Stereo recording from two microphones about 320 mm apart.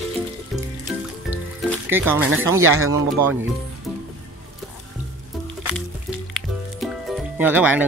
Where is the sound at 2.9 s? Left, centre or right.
Centre.